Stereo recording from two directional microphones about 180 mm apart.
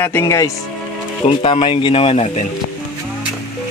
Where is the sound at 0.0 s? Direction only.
15° left (ahead or behind).